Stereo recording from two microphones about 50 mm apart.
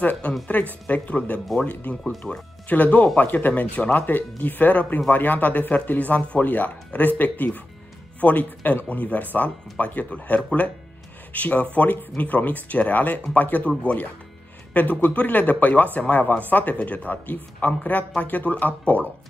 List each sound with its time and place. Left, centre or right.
0.0 s speech: left
2.0 s speech: centre
2.7 s speech: left